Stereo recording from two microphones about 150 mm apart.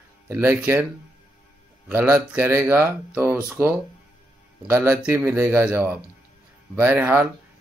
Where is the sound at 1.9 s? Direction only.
15° right (ahead or behind).